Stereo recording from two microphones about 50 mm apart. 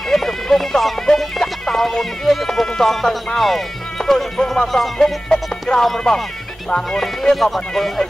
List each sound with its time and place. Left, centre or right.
0.1 s music: centre
3.3 s speech: centre